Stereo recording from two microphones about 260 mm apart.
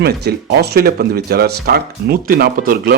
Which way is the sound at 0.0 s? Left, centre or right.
Right.